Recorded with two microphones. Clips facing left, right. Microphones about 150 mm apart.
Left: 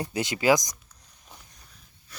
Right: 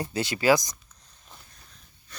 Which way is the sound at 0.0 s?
20° left (ahead or behind).